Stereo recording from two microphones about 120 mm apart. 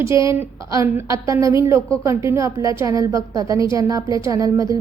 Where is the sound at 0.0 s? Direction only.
25° right (ahead or behind).